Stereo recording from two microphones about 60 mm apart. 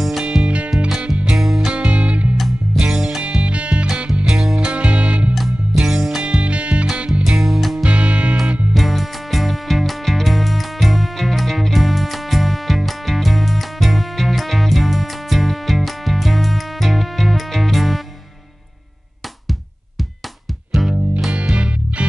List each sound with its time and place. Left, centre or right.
0.2 s music: centre
1.4 s music: centre
1.7 s music: centre
2.3 s music: centre; by 5.3 s right
5.3 s music: centre
6.2 s music: right
6.9 s music: centre
7.8 s music: centre
8.7 s music: centre
20.8 s music: centre
21.3 s music: centre